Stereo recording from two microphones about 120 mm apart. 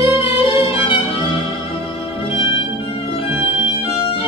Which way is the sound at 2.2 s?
45° left (ahead or behind).